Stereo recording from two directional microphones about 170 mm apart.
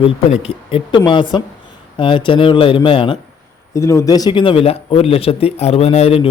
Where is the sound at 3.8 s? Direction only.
20° left (ahead or behind).